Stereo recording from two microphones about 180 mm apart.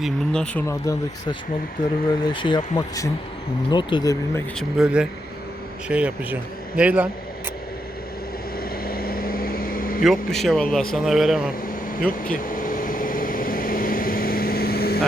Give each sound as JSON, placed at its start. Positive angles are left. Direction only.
{"t": 0.0, "sound": "a man's voice", "side_deg": 5}
{"t": 0.9, "sound": "speech", "side_deg": 20}
{"t": 2.2, "sound": "speech", "side_deg": 25}
{"t": 4.8, "sound": "a man's voice", "side_deg": -5}
{"t": 8.5, "sound": "vehicle", "side_deg": 55}
{"t": 10.0, "sound": "a man's voice", "side_deg": 0}
{"t": 11.9, "sound": "vehicle", "side_deg": 50}